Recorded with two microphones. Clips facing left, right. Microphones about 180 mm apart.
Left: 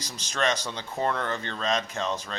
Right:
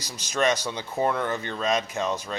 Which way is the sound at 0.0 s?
10° right (ahead or behind).